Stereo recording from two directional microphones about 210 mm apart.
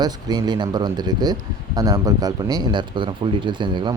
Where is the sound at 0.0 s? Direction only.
20° right (ahead or behind).